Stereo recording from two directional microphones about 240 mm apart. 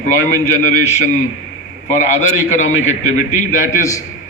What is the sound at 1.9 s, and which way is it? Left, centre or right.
A man's voice, left.